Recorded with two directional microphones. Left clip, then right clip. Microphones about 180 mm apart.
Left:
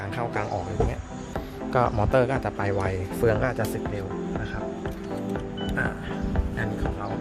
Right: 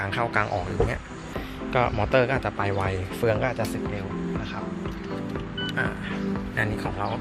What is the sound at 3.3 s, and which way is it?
Speech, 35° left (ahead or behind).